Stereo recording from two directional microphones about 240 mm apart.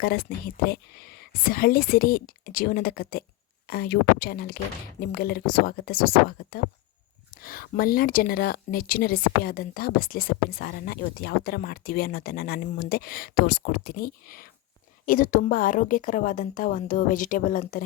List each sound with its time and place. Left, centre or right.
0.0 s speech: left